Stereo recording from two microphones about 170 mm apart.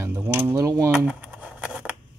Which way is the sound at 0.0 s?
15° right (ahead or behind).